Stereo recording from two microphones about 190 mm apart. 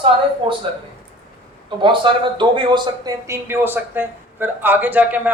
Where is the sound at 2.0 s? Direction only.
25° right (ahead or behind).